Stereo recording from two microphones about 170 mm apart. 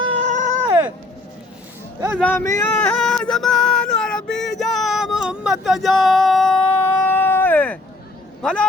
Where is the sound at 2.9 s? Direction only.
5° left (ahead or behind).